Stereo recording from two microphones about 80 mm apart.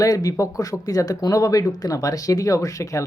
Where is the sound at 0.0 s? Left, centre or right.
Left.